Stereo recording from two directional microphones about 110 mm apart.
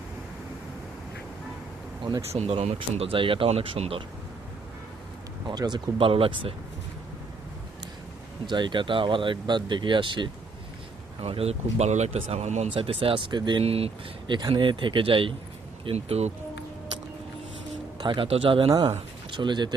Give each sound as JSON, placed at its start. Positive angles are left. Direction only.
{"t": 2.3, "sound": "speech", "side_deg": -80}
{"t": 2.9, "sound": "speech", "side_deg": -60}
{"t": 5.5, "sound": "speech", "side_deg": -40}
{"t": 8.4, "sound": "speech", "side_deg": -45}
{"t": 11.2, "sound": "speech", "side_deg": -65}
{"t": 12.7, "sound": "speech", "side_deg": -55}
{"t": 13.7, "sound": "speech", "side_deg": -65}
{"t": 14.3, "sound": "speech", "side_deg": -45}
{"t": 17.9, "sound": "speech", "side_deg": -45}
{"t": 19.3, "sound": "speech", "side_deg": -45}